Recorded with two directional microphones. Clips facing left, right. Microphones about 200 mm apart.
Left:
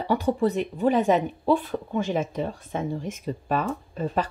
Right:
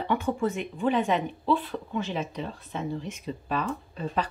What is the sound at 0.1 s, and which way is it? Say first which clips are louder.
Speech: left 5 dB; 35° left (ahead or behind).